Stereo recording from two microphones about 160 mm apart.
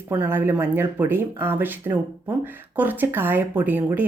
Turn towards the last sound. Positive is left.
turn(degrees=-10)  # may be behind; listen again after turning